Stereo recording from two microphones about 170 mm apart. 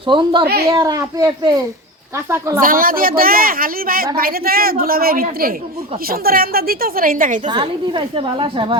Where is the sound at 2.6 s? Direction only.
55° right (ahead or behind).